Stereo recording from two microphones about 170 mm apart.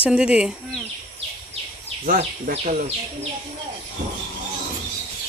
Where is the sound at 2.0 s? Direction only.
50° right (ahead or behind).